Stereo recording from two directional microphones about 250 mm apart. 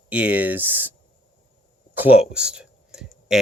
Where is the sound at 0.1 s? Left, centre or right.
Centre.